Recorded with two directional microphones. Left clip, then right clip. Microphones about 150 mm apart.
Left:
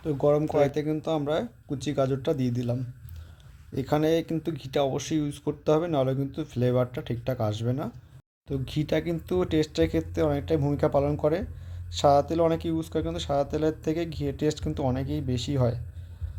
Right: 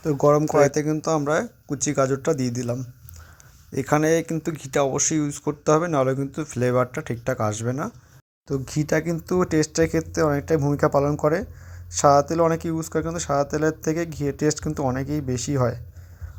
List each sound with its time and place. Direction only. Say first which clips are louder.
0.0 s speech: right 5 dB; 30° right (ahead or behind)
8.6 s speech: right 4 dB; 5° right (ahead or behind)
9.0 s speech: right 4 dB; 25° right (ahead or behind)
9.6 s speech: right 3 dB; 10° right (ahead or behind)
10.0 s speech: right 4 dB; 30° right (ahead or behind)